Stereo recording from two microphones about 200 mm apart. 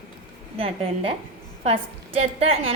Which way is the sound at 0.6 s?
30° right (ahead or behind).